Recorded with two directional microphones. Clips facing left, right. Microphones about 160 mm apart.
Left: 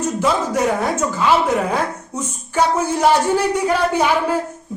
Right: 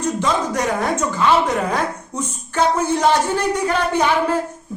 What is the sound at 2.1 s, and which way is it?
Speech, 10° left (ahead or behind).